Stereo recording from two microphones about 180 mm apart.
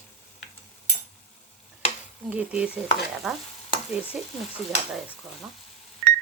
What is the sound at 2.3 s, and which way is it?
Stir, 5° right (ahead or behind).